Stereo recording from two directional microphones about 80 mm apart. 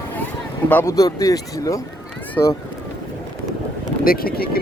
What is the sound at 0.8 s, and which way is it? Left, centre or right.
A man's voice, left.